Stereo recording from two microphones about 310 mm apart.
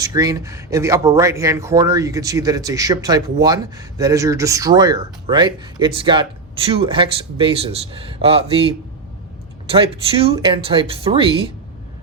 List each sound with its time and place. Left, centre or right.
0.0 s speech: centre